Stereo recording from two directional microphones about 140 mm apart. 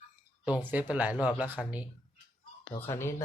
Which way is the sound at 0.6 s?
10° right (ahead or behind).